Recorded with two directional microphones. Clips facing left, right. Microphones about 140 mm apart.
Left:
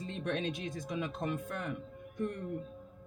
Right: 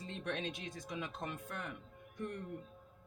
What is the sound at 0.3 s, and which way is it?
Speech, 55° left (ahead or behind).